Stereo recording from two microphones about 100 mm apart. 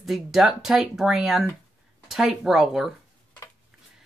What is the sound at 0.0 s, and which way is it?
Speech, centre (ahead or behind).